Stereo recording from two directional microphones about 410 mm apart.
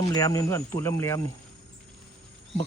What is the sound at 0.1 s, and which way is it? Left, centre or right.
Speech, centre.